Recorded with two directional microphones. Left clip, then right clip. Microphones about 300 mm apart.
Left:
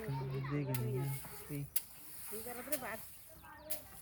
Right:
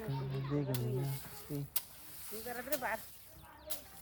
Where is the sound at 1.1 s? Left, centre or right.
Centre.